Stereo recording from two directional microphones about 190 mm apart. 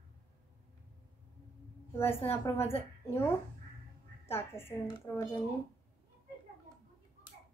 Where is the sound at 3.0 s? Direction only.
10° left (ahead or behind).